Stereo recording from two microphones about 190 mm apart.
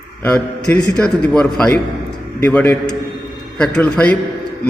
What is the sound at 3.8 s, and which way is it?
Speech, 5° left (ahead or behind).